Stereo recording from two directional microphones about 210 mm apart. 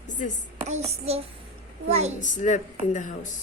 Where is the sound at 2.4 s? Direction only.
35° left (ahead or behind).